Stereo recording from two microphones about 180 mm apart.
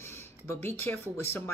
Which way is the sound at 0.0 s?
15° left (ahead or behind).